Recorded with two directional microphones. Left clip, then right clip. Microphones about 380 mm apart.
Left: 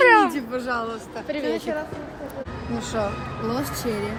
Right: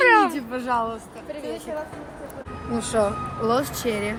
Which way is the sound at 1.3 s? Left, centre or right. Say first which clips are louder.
Left 6 dB; left.